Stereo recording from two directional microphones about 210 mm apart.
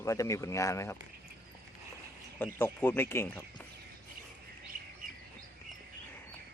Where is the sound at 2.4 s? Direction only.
10° left (ahead or behind).